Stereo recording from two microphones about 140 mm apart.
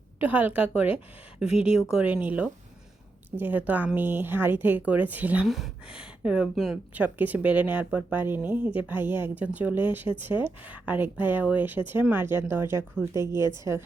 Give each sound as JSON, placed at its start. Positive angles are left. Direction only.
{"t": 0.2, "sound": "speech", "side_deg": -10}